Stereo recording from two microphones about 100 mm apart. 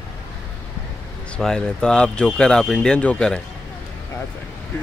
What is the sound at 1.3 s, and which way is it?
Speech, 5° left (ahead or behind).